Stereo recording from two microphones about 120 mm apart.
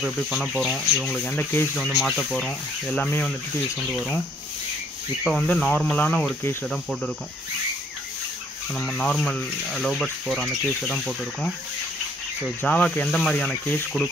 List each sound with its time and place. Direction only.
0.0 s speech: centre (ahead or behind)
1.3 s speech: 15° left (ahead or behind)
1.9 s speech: centre (ahead or behind)
5.4 s speech: 10° left (ahead or behind)
8.7 s speech: 5° left (ahead or behind)
12.6 s speech: 10° left (ahead or behind)